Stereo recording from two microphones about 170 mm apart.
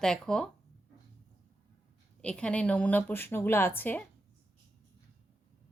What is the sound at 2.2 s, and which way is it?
A woman's voice, 5° left (ahead or behind).